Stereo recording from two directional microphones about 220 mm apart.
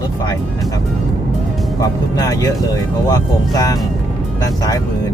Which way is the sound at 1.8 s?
15° left (ahead or behind).